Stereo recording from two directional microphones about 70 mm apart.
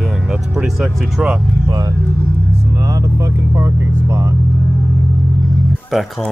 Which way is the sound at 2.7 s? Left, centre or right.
Right.